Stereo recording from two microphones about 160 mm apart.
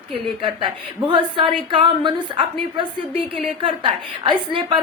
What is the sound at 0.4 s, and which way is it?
A woman's voice, 30° right (ahead or behind).